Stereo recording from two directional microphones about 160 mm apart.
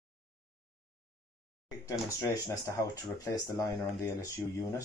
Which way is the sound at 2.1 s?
20° left (ahead or behind).